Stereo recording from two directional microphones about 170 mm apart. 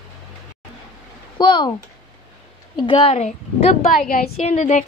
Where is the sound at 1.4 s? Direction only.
30° left (ahead or behind).